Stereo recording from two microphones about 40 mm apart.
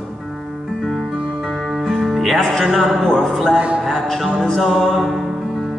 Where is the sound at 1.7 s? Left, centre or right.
Centre.